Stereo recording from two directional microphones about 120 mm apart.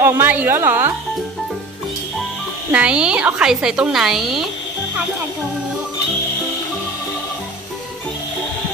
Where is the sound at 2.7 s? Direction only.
10° right (ahead or behind).